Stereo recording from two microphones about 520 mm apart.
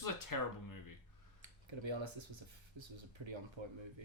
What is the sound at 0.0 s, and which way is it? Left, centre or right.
Speech, left.